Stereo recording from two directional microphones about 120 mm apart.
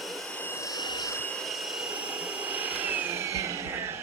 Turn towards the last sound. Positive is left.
turn(degrees=-20)  # may be behind; listen again after turning